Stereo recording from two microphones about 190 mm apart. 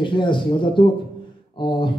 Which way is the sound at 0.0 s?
25° left (ahead or behind).